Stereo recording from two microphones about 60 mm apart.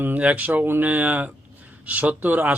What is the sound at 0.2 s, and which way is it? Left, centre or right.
Speech, right.